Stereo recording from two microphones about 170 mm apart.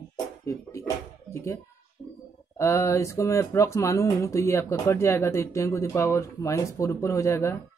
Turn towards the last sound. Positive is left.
turn(degrees=15)  # may be behind; listen again after turning